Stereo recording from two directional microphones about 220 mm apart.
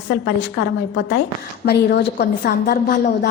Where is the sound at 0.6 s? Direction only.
55° left (ahead or behind).